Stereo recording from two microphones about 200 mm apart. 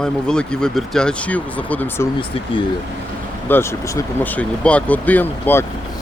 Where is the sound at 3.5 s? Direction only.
15° left (ahead or behind).